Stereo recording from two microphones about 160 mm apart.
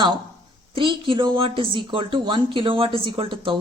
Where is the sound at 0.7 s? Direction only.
30° right (ahead or behind).